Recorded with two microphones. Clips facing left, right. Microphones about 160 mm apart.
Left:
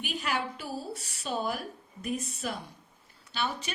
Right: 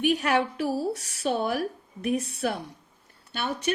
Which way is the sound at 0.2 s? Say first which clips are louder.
Right 8 dB; 65° right (ahead or behind).